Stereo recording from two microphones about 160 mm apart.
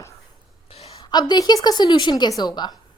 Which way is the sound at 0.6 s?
40° left (ahead or behind).